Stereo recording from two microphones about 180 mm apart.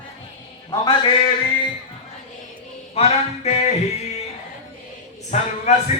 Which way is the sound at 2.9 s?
35° left (ahead or behind).